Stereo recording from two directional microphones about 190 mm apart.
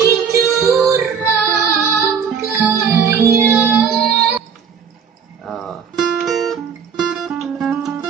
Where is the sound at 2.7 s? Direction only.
15° right (ahead or behind).